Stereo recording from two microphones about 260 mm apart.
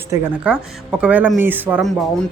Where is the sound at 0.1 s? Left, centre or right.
Centre.